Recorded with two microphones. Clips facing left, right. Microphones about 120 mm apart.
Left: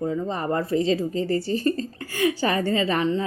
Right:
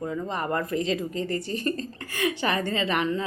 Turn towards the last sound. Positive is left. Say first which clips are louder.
# left 3 dB
turn(degrees=30)  # may be behind; listen again after turning